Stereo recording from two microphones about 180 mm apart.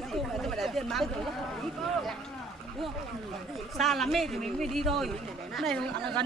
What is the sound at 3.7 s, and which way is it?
A man's voice, centre (ahead or behind).